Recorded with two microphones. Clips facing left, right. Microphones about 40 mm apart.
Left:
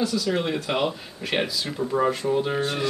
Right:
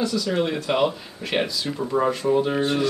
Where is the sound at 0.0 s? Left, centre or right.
Centre.